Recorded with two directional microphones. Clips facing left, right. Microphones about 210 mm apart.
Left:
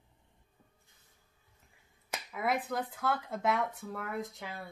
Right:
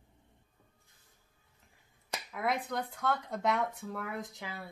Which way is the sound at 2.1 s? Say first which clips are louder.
Left 1 dB; 5° left (ahead or behind).